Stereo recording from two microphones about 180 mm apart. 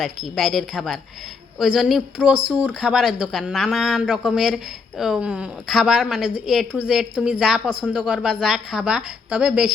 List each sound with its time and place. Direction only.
0.0 s speech: centre (ahead or behind)